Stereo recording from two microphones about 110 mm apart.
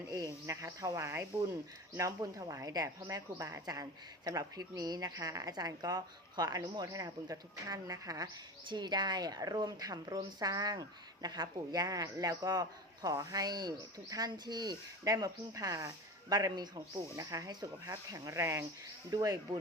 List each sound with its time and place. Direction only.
0.4 s speech: 30° right (ahead or behind)